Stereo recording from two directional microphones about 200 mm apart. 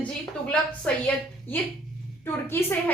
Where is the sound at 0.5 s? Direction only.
5° left (ahead or behind).